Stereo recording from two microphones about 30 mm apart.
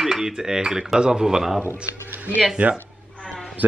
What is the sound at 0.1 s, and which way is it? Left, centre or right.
Dishes, centre.